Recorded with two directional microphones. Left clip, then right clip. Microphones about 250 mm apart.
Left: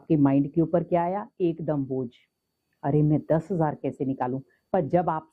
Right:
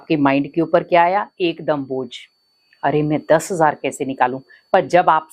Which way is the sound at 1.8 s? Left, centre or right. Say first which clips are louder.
Right 6 dB; right.